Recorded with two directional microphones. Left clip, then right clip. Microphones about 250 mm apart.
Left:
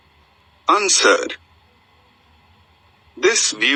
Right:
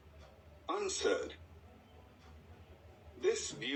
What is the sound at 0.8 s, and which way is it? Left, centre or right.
Speech, left.